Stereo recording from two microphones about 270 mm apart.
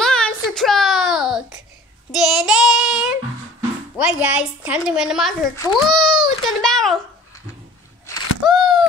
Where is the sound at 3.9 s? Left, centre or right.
Centre.